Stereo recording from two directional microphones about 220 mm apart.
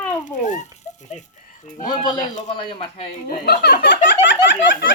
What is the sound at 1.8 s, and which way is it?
Speech, 15° left (ahead or behind).